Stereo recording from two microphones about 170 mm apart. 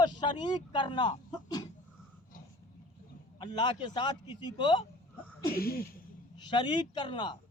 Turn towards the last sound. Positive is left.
turn(degrees=25)  # may be behind; listen again after turning